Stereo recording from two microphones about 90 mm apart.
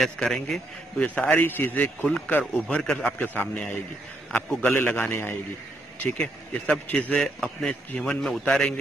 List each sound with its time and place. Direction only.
0.0 s a man's voice: 5° left (ahead or behind)
1.0 s a man's voice: 15° left (ahead or behind)
2.8 s a man's voice: 5° left (ahead or behind)
3.2 s a man's voice: 20° left (ahead or behind)
7.3 s a man's voice: centre (ahead or behind)